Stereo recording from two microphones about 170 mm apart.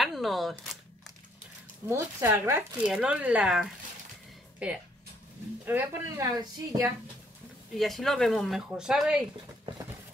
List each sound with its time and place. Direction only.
0.0 s speech: centre (ahead or behind)
1.9 s a woman's voice: 15° right (ahead or behind)
5.7 s a woman's voice: 10° right (ahead or behind)
7.7 s speech: centre (ahead or behind)